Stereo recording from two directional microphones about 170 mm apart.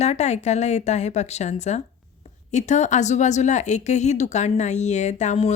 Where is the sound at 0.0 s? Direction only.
40° left (ahead or behind).